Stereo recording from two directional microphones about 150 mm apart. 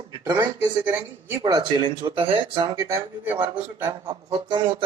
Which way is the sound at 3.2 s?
10° right (ahead or behind).